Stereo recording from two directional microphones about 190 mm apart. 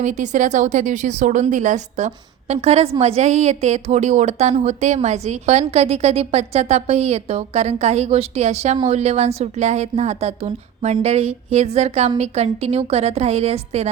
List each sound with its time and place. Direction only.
0.0 s a woman's voice: 40° right (ahead or behind)